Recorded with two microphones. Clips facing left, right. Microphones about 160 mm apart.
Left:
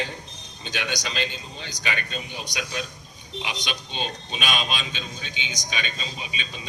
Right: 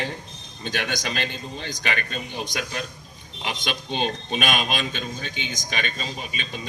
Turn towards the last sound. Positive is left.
turn(degrees=-50)  # may be behind; listen again after turning